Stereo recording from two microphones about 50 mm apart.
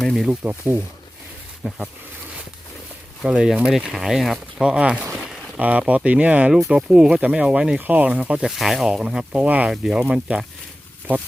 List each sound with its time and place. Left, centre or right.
0.0 s a sound: centre
0.3 s speech: right
1.6 s speech: right
3.2 s speech: centre
4.6 s speech: centre
7.8 s speech: right
8.0 s speech: centre
8.4 s speech: centre
9.3 s speech: right